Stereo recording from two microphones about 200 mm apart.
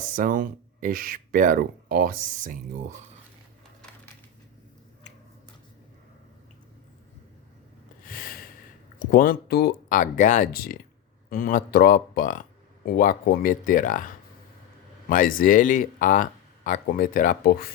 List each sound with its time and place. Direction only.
0.0 s speech: 40° right (ahead or behind)
8.0 s snort: 45° left (ahead or behind)
9.0 s speech: 45° left (ahead or behind)
15.1 s speech: 45° left (ahead or behind)